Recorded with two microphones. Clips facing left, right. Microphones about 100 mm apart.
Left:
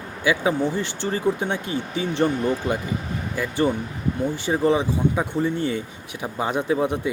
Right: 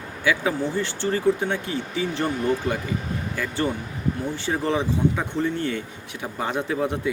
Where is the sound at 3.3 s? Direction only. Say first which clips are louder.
Left 5 dB; 15° left (ahead or behind).